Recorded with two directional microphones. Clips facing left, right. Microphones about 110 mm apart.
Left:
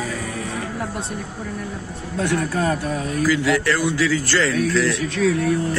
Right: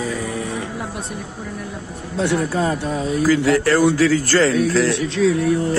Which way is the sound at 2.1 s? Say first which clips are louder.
Right 2 dB; 20° right (ahead or behind).